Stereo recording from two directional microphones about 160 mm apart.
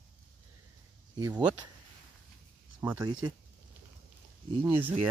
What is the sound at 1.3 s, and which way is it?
Speech, 10° right (ahead or behind).